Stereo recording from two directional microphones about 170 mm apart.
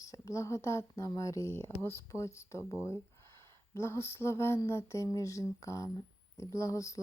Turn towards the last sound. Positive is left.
turn(degrees=20)  # may be behind; listen again after turning